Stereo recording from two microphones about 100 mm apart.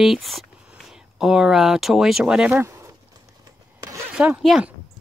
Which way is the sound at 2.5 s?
30° right (ahead or behind).